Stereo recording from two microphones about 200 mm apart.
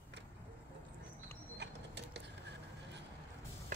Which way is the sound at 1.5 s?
60° right (ahead or behind).